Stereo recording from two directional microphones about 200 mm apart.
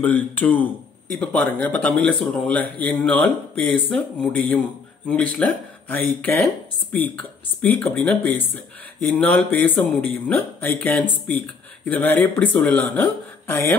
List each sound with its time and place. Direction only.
0.0 s speech: 10° left (ahead or behind)